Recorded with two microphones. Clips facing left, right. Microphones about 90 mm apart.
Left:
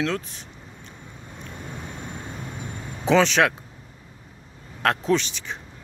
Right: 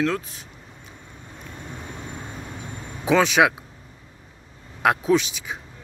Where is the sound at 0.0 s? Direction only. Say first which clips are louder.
Right 2 dB; 5° right (ahead or behind).